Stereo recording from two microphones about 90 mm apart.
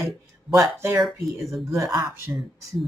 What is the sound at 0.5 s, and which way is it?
Speech, 30° right (ahead or behind).